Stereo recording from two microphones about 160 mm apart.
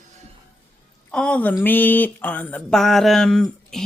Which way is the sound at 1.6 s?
10° left (ahead or behind).